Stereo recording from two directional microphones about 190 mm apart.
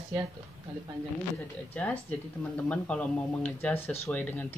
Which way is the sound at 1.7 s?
10° left (ahead or behind).